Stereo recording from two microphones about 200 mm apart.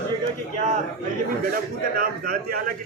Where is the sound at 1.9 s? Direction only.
45° right (ahead or behind).